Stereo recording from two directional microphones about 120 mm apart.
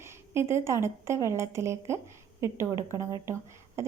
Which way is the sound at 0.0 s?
20° right (ahead or behind).